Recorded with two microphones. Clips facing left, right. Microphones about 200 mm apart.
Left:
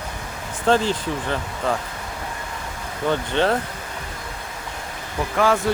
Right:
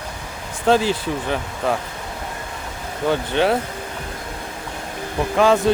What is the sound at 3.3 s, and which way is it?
Speech, 10° right (ahead or behind).